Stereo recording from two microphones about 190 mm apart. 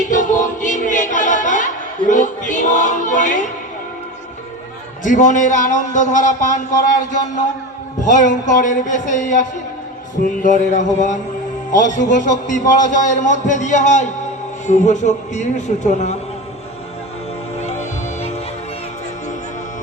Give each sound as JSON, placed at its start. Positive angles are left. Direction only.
{"t": 0.1, "sound": "music", "side_deg": 40}
{"t": 5.0, "sound": "a man's voice", "side_deg": 40}
{"t": 17.6, "sound": "music", "side_deg": 35}